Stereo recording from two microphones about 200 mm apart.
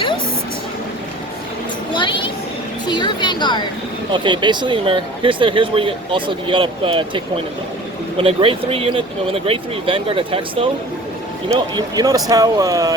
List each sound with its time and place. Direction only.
1.9 s a sound: 25° left (ahead or behind)
2.8 s a woman's voice: 20° left (ahead or behind)
4.1 s speech: 25° right (ahead or behind)
8.2 s speech: 30° right (ahead or behind)